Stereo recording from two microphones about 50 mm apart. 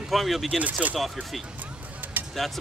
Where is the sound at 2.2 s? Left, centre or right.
Right.